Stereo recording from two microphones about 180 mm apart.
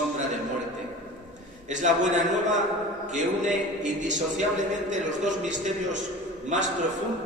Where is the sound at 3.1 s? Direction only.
45° right (ahead or behind).